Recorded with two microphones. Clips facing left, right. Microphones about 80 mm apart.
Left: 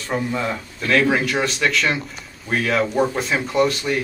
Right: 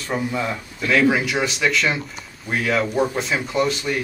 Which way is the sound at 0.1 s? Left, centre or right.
Centre.